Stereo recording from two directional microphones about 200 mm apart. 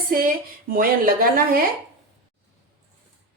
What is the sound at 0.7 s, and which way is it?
Speech, 45° right (ahead or behind).